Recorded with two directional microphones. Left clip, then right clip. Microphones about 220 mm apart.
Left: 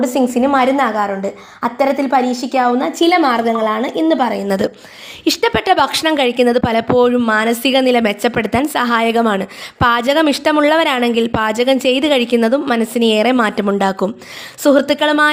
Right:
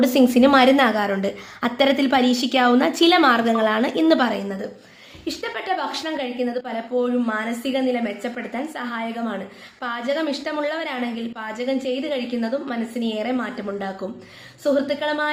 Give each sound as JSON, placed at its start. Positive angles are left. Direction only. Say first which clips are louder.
{"t": 0.3, "sound": "a woman's voice", "louder": "left 1 dB", "side_deg": -15}
{"t": 0.9, "sound": "a woman's voice", "louder": "left 5 dB", "side_deg": 0}
{"t": 1.6, "sound": "a woman's voice", "louder": "left 4 dB", "side_deg": -10}
{"t": 2.0, "sound": "a woman's voice", "louder": "left 5 dB", "side_deg": 0}
{"t": 2.4, "sound": "a woman's voice", "louder": "left 4 dB", "side_deg": -15}
{"t": 2.6, "sound": "a woman's voice", "louder": "left 1 dB", "side_deg": 0}
{"t": 3.0, "sound": "a woman's voice", "louder": "left 4 dB", "side_deg": 10}
{"t": 4.4, "sound": "a woman's voice", "louder": "left 13 dB", "side_deg": 50}